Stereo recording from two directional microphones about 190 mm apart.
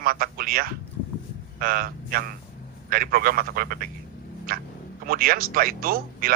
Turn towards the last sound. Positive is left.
turn(degrees=-50)  # may be behind; listen again after turning